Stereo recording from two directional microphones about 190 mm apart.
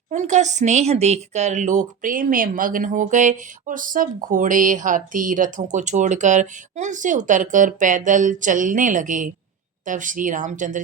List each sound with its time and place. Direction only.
0.1 s speech: 40° right (ahead or behind)